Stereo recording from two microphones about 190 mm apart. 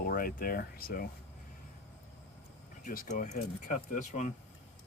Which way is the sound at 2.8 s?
45° left (ahead or behind).